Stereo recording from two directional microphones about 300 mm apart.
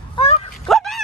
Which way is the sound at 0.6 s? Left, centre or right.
Centre.